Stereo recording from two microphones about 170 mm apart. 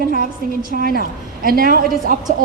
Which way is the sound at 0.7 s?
60° right (ahead or behind).